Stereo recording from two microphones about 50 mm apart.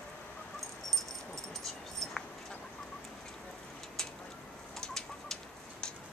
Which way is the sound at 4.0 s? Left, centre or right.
Centre.